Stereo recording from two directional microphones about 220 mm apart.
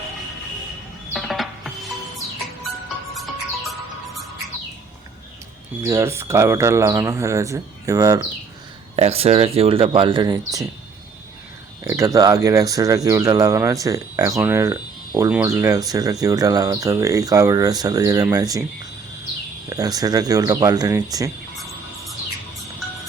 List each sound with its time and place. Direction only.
1.1 s music: centre (ahead or behind)
5.8 s speech: 15° right (ahead or behind)
9.0 s speech: 30° right (ahead or behind)
11.8 s speech: 15° right (ahead or behind)
19.7 s speech: 15° right (ahead or behind)